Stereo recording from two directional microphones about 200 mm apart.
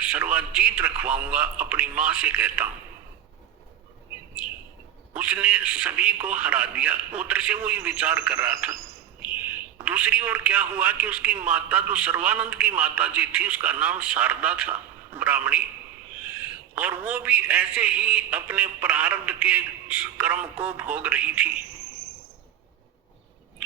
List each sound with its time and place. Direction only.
0.0 s a man's voice: 10° right (ahead or behind)
5.1 s a man's voice: 10° right (ahead or behind)
9.2 s a sound: 10° right (ahead or behind)
9.8 s a man's voice: 10° right (ahead or behind)